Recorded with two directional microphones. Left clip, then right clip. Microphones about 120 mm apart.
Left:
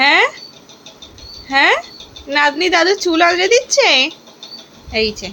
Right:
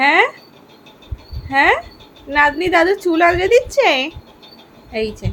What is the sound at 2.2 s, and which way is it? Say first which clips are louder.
A woman's voice: even; centre (ahead or behind).